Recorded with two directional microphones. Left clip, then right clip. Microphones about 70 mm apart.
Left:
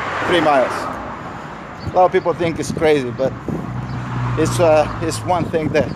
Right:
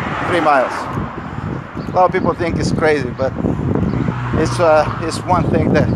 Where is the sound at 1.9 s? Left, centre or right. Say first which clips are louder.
Even; left.